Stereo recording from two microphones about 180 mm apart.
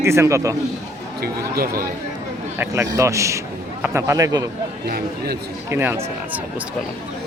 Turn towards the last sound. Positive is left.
turn(degrees=-10)  # may be behind; listen again after turning